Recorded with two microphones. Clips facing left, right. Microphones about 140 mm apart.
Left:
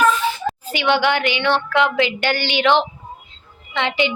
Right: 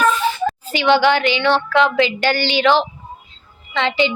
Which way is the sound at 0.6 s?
15° left (ahead or behind).